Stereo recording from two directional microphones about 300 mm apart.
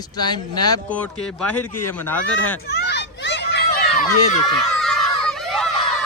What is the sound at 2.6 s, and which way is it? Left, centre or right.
Children playing, left.